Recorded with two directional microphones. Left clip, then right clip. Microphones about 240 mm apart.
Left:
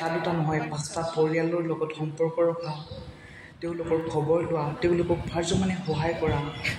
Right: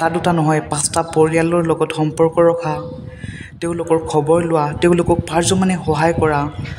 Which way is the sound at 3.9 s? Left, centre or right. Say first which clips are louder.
Right 10 dB; right.